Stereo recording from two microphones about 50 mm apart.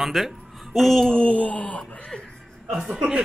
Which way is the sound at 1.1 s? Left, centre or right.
Left.